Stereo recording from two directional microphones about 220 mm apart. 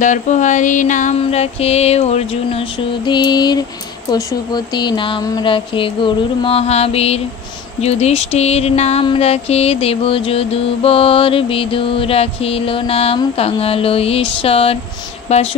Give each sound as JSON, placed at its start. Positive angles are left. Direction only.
{"t": 0.0, "sound": "music", "side_deg": 35}
{"t": 3.1, "sound": "a sound", "side_deg": 20}
{"t": 15.2, "sound": "a woman's voice", "side_deg": 30}